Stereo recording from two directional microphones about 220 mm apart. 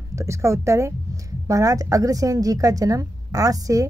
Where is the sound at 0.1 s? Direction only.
15° right (ahead or behind).